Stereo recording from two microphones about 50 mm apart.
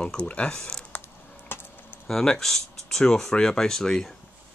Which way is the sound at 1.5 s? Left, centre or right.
Left.